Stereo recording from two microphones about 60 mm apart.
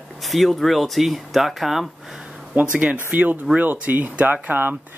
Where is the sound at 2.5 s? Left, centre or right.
Right.